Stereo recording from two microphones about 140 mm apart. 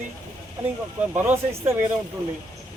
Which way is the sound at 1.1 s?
15° right (ahead or behind).